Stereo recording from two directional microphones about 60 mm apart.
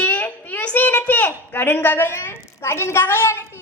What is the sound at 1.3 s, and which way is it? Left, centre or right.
A woman's voice, left.